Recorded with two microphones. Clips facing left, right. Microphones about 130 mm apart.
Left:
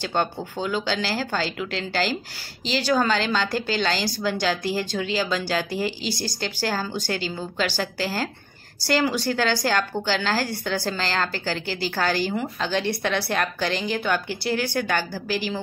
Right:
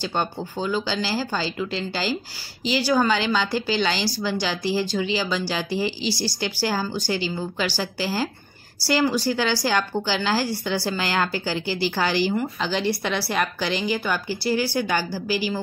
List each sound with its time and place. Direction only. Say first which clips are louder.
0.0 s a woman's voice: left 1 dB; 5° right (ahead or behind)
14.4 s speech: right 2 dB; 60° left (ahead or behind)
14.7 s a woman's voice: right 1 dB; 10° right (ahead or behind)
15.2 s speech: right 2 dB; 55° left (ahead or behind)